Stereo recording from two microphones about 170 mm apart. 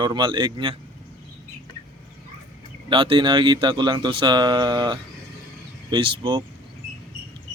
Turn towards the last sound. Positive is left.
turn(degrees=-25)  # may be behind; listen again after turning